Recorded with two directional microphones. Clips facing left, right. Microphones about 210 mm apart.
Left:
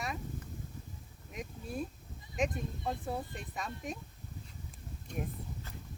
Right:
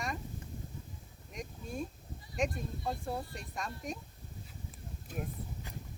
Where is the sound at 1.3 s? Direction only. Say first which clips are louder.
Left 1 dB; 5° left (ahead or behind).